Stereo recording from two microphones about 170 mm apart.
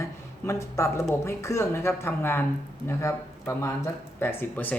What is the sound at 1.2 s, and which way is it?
Speech, 15° left (ahead or behind).